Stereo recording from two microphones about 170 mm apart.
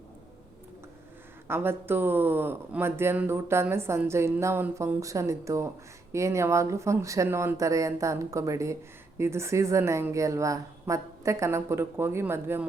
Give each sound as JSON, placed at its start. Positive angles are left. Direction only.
{"t": 1.5, "sound": "speech", "side_deg": -15}